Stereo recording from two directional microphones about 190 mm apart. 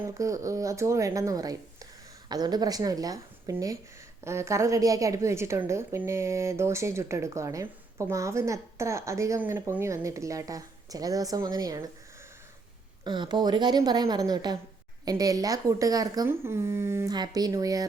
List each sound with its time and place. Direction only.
0.0 s a woman's voice: 15° right (ahead or behind)
13.1 s speech: 25° right (ahead or behind)